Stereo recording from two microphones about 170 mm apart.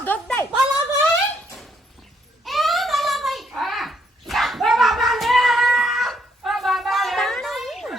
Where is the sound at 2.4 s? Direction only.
Centre (ahead or behind).